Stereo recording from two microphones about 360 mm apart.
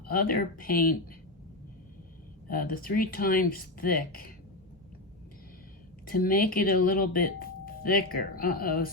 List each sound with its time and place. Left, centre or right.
0.1 s speech: left
2.5 s speech: left
6.1 s speech: left